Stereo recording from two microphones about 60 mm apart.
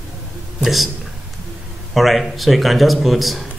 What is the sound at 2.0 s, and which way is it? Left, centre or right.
Speech, centre.